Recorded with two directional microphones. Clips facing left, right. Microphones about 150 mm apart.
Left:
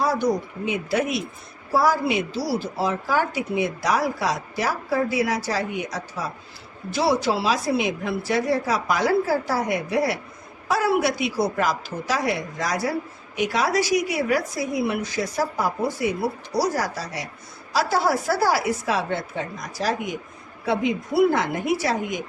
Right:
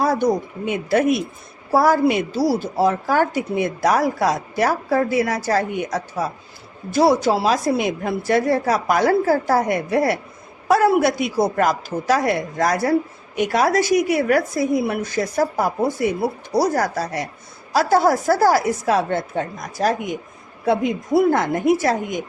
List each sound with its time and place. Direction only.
0.0 s a woman's voice: 55° right (ahead or behind)